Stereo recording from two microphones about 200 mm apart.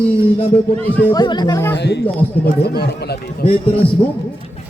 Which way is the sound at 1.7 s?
55° left (ahead or behind).